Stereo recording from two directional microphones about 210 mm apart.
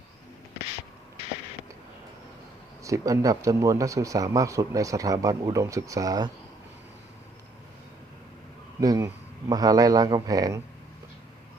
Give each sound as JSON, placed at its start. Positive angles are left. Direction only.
{"t": 2.8, "sound": "speech", "side_deg": -15}
{"t": 8.8, "sound": "speech", "side_deg": -15}